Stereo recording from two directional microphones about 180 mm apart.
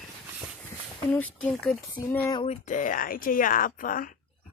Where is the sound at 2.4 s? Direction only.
40° left (ahead or behind).